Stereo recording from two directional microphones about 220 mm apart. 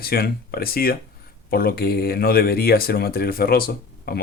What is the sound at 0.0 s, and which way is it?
Speech, 45° left (ahead or behind).